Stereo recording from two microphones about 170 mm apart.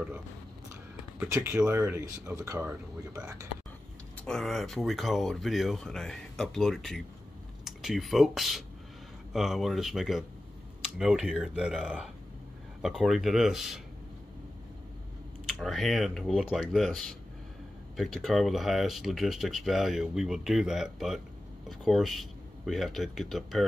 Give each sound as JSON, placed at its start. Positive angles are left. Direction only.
{"t": 1.2, "sound": "speech", "side_deg": -15}
{"t": 4.2, "sound": "speech", "side_deg": 0}
{"t": 15.4, "sound": "speech", "side_deg": 0}